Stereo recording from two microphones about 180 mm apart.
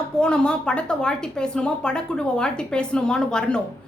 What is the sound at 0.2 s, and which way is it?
A woman's voice, 5° left (ahead or behind).